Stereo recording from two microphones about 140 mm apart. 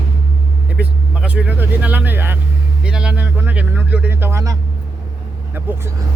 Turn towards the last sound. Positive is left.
turn(degrees=-15)  # may be behind; listen again after turning